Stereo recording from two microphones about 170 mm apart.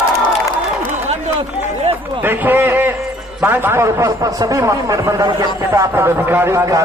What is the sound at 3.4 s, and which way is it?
A man's voice, 10° right (ahead or behind).